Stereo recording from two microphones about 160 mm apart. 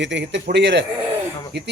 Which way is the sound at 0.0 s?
90° right.